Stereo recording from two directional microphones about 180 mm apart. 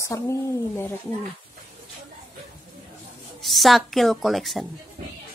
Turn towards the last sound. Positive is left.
turn(degrees=0)  # may be behind; listen again after turning